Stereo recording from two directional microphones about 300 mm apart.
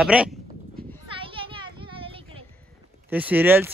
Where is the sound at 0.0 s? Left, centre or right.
Centre.